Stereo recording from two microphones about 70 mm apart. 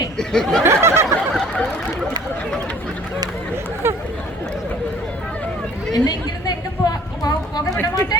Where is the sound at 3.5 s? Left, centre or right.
Right.